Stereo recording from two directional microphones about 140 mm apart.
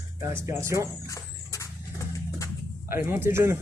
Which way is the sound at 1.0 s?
20° left (ahead or behind).